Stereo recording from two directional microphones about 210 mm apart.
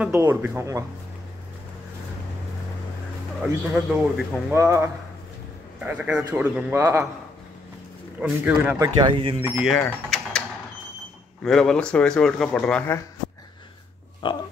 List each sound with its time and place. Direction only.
0.0 s a man's voice: 10° right (ahead or behind)
3.7 s a man's voice: 5° right (ahead or behind)
8.2 s speech: 5° right (ahead or behind)
8.7 s speech: 20° right (ahead or behind)
9.4 s speech: 5° right (ahead or behind)
9.8 s mechanisms: 5° left (ahead or behind)
11.4 s speech: centre (ahead or behind)
14.2 s pig: 25° left (ahead or behind)